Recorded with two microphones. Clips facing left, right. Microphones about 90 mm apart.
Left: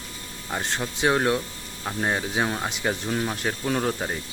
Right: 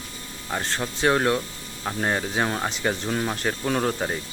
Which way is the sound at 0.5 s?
10° left (ahead or behind).